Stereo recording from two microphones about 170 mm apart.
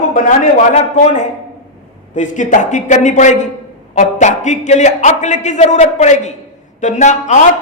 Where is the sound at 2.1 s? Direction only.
45° left (ahead or behind).